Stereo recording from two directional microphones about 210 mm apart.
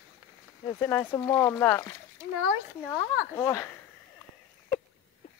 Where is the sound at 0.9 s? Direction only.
10° left (ahead or behind).